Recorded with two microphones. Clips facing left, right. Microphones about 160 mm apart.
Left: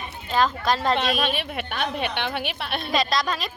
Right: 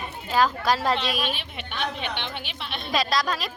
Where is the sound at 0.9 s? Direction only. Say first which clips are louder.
Left 3 dB; 55° left (ahead or behind).